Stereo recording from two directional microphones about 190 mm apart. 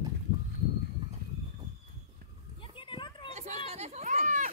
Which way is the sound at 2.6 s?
25° left (ahead or behind).